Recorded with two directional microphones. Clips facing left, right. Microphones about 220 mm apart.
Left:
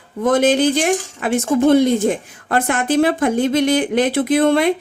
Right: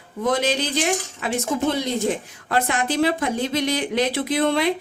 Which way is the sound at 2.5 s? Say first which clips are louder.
Left 5 dB; 50° left (ahead or behind).